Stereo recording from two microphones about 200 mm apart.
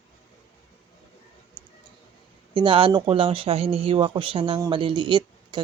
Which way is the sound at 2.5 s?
25° right (ahead or behind).